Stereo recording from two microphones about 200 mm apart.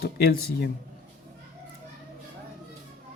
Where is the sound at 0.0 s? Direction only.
50° left (ahead or behind).